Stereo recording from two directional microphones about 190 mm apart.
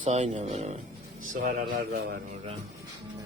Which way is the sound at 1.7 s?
55° right (ahead or behind).